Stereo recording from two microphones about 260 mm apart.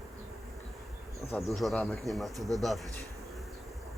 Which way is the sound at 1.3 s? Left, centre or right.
Centre.